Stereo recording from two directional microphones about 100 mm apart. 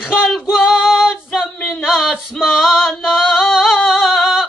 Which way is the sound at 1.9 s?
5° right (ahead or behind).